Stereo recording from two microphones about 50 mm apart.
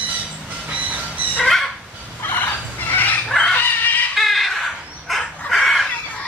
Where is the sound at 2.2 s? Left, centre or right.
Left.